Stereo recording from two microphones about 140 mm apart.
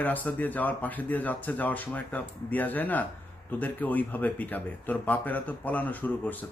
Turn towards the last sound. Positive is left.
turn(degrees=10)  # may be behind; listen again after turning